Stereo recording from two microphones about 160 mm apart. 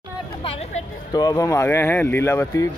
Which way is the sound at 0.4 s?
35° left (ahead or behind).